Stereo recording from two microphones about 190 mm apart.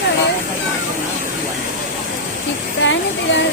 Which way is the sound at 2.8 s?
75° left (ahead or behind).